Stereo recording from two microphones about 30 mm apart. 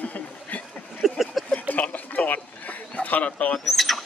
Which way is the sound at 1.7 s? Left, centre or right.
Left.